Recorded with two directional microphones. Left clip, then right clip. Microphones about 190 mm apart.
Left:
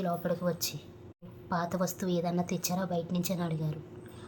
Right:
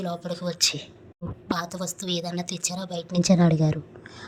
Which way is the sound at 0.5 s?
45° right (ahead or behind).